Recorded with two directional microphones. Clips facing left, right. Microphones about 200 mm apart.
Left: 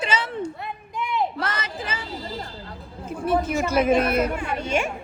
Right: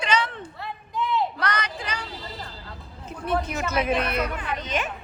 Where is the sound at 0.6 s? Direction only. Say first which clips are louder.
Right 2 dB; 15° left (ahead or behind).